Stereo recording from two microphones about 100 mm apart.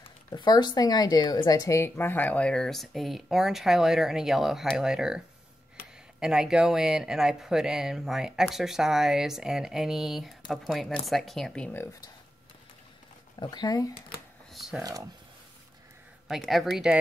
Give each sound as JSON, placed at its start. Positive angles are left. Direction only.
{"t": 0.3, "sound": "a woman's voice", "side_deg": 45}
{"t": 13.4, "sound": "speech", "side_deg": 45}
{"t": 14.5, "sound": "a sound", "side_deg": 0}
{"t": 14.8, "sound": "speech", "side_deg": -40}
{"t": 16.3, "sound": "a woman's voice", "side_deg": 0}